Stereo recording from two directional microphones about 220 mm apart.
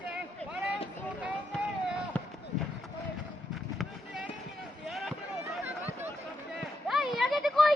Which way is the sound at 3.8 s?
Centre (ahead or behind).